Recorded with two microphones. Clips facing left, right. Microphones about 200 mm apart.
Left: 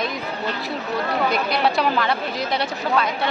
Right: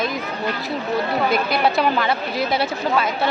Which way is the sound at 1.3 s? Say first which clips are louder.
Right 2 dB; centre (ahead or behind).